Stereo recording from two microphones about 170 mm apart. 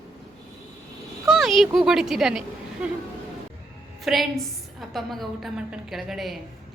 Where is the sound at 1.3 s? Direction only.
Centre (ahead or behind).